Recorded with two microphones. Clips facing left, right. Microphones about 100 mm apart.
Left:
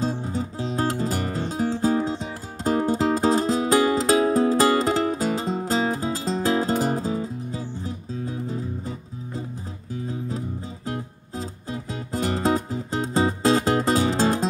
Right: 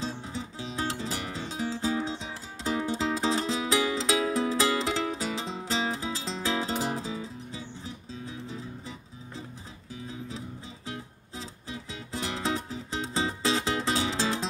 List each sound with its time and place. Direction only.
0.0 s music: 45° left (ahead or behind)
10.9 s music: 45° left (ahead or behind)